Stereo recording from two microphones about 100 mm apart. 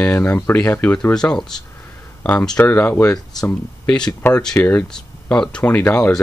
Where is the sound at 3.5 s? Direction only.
10° left (ahead or behind).